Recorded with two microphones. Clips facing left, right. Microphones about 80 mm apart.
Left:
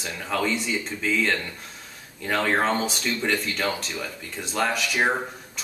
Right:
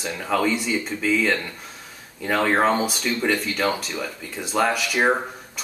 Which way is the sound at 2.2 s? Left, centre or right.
Centre.